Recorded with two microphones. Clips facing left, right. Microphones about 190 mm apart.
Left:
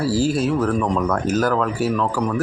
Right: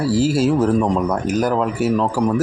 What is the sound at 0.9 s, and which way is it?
Speech, 15° right (ahead or behind).